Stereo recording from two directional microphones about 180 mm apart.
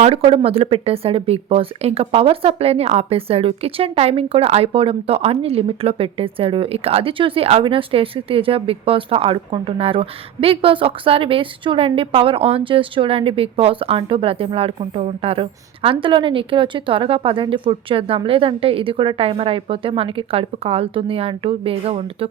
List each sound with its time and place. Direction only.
0.0 s speech: 30° right (ahead or behind)